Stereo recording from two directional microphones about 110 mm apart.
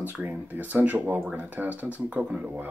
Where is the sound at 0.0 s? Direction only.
15° right (ahead or behind).